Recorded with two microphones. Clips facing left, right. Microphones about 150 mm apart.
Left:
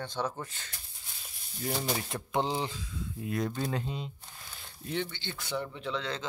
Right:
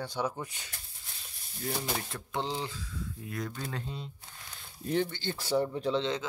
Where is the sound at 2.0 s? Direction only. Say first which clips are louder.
Left 4 dB; 15° left (ahead or behind).